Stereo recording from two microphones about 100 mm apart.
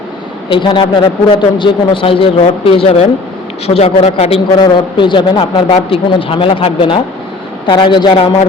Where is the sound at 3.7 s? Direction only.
85° left.